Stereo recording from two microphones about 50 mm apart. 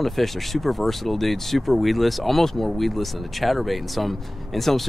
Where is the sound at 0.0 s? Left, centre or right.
Centre.